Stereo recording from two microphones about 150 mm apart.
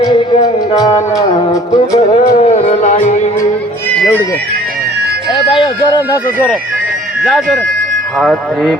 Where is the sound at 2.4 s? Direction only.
45° left (ahead or behind).